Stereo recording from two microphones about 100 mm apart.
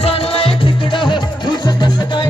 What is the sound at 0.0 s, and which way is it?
Music, 75° left (ahead or behind).